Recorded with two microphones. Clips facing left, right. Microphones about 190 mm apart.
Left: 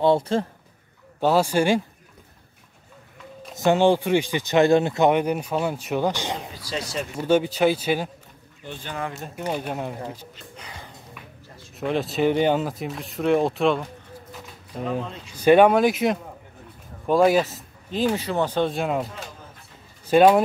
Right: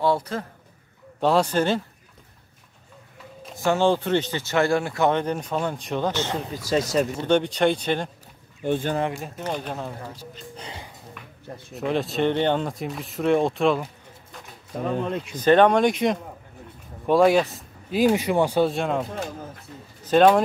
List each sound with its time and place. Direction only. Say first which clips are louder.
0.0 s a man's voice: left 4 dB; 25° left (ahead or behind)
1.2 s speech: left 1 dB; 5° left (ahead or behind)
3.5 s speech: left 2 dB; 20° left (ahead or behind)
6.5 s speech: right 8 dB; 45° right (ahead or behind)
7.2 s speech: left 5 dB; 5° left (ahead or behind)
8.6 s speech: right 12 dB; 55° right (ahead or behind)
9.3 s speech: left 2 dB; 10° left (ahead or behind)
10.3 s speech: right 4 dB; 30° right (ahead or behind)
11.7 s speech: even; centre (ahead or behind)
15.0 s speech: right 10 dB; 60° right (ahead or behind)
15.3 s speech: left 2 dB; 10° left (ahead or behind)
17.9 s speech: right 3 dB; 15° right (ahead or behind)
18.7 s speech: even; centre (ahead or behind)
20.1 s speech: left 1 dB; 10° left (ahead or behind)